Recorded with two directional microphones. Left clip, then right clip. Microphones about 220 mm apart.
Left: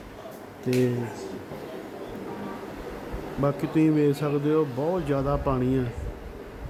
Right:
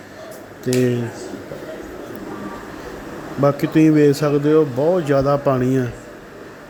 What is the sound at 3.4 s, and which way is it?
A man's voice, 10° right (ahead or behind).